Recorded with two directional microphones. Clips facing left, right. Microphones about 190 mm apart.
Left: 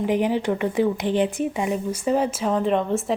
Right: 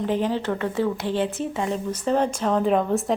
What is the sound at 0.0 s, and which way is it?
A woman's voice, 15° left (ahead or behind).